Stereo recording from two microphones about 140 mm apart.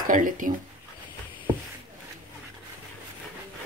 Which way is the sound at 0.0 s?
75° right (ahead or behind).